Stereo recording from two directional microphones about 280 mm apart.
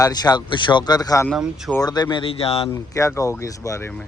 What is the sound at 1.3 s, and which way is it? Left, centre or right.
Speech, centre.